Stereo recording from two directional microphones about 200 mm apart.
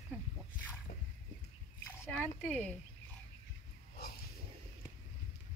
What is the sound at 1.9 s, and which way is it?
Speech, 5° left (ahead or behind).